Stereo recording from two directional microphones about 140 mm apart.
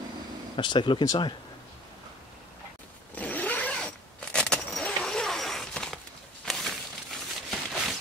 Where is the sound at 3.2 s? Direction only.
10° left (ahead or behind).